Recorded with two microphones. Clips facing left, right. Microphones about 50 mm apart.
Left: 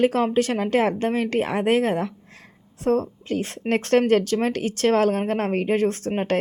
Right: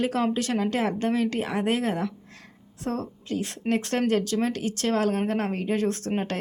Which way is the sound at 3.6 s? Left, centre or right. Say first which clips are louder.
Left 6 dB; left.